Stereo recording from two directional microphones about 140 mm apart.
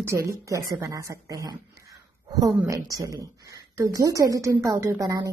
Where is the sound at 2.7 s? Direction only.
25° right (ahead or behind).